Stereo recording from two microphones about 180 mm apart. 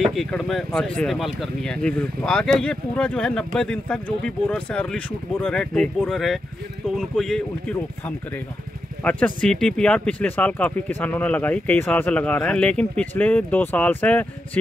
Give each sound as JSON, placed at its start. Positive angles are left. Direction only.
{"t": 0.0, "sound": "speech", "side_deg": 0}
{"t": 9.0, "sound": "speech", "side_deg": 5}